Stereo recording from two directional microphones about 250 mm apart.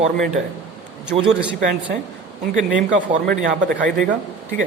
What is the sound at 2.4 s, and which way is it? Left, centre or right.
Speech, right.